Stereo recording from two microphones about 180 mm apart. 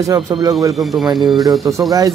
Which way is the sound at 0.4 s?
20° right (ahead or behind).